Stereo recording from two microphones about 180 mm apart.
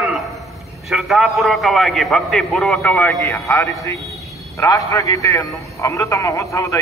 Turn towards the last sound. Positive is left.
turn(degrees=15)  # may be behind; listen again after turning